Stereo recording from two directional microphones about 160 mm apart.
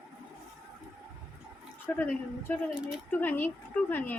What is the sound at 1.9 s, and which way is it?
A woman's voice, 10° left (ahead or behind).